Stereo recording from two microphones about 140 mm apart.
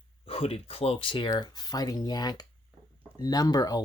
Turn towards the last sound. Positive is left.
turn(degrees=25)  # may be behind; listen again after turning